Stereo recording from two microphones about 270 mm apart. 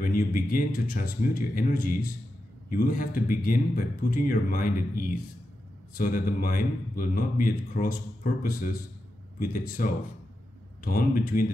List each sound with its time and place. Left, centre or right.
0.0 s speech: left